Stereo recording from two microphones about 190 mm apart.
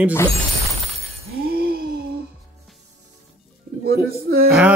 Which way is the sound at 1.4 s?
55° right (ahead or behind).